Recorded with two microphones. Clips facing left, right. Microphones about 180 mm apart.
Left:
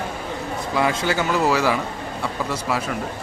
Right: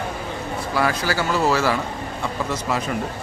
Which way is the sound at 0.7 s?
20° left (ahead or behind).